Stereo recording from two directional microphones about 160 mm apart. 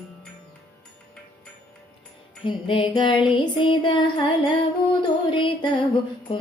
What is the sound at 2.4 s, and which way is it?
Music, 30° left (ahead or behind).